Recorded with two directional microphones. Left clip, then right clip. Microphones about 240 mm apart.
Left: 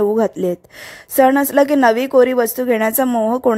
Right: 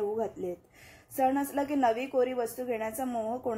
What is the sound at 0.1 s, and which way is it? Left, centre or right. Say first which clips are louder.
A woman's voice: left 16 dB; left.